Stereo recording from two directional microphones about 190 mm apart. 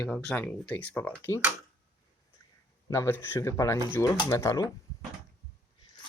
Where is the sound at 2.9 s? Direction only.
15° left (ahead or behind).